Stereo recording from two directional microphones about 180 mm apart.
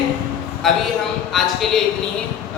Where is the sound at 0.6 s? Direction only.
Centre (ahead or behind).